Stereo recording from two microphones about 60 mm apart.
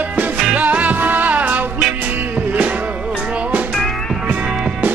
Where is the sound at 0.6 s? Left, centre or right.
Right.